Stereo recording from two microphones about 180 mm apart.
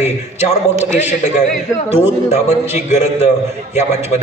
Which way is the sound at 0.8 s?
40° left (ahead or behind).